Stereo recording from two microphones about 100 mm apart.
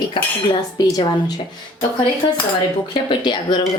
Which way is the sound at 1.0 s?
45° left (ahead or behind).